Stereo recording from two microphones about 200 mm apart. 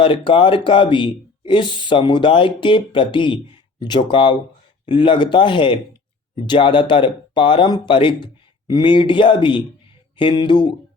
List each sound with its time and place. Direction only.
0.0 s speech: 25° left (ahead or behind)